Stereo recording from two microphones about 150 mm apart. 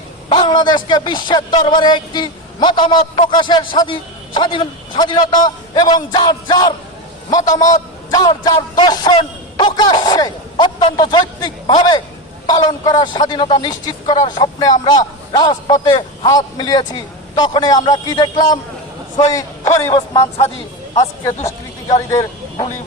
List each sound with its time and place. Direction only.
0.3 s a man's voice: 30° left (ahead or behind)
21.4 s speech: 25° left (ahead or behind)